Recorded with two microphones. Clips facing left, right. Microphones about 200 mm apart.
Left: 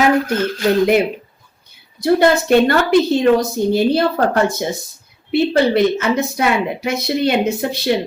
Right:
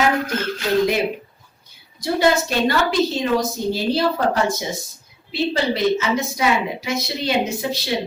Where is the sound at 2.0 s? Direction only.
60° left (ahead or behind).